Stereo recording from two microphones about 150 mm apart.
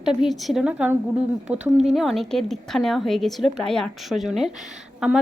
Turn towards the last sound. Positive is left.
turn(degrees=-5)  # may be behind; listen again after turning